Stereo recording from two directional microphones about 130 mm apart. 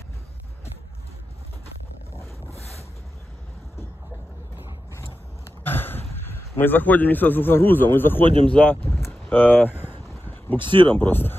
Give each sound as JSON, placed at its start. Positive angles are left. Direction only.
{"t": 4.9, "sound": "a sound", "side_deg": 20}
{"t": 8.5, "sound": "speech", "side_deg": 10}
{"t": 10.6, "sound": "speech", "side_deg": -40}
{"t": 11.0, "sound": "speech", "side_deg": 15}